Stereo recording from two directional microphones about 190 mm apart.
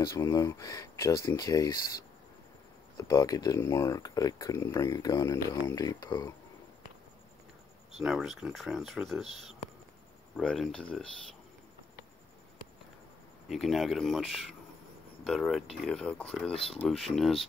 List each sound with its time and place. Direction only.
0.0 s speech: 20° left (ahead or behind)
3.0 s speech: 20° left (ahead or behind)
8.0 s speech: centre (ahead or behind)
13.5 s speech: centre (ahead or behind)